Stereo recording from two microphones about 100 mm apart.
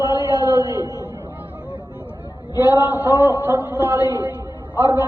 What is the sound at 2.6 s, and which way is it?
A man's voice, 20° right (ahead or behind).